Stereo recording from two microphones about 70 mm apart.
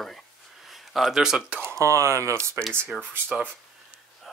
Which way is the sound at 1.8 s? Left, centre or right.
Right.